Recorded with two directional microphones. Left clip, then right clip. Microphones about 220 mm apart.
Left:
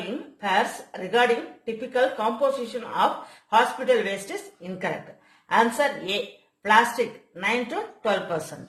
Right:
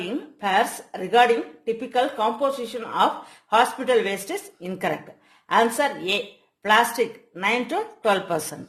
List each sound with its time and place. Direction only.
0.1 s speech: 50° right (ahead or behind)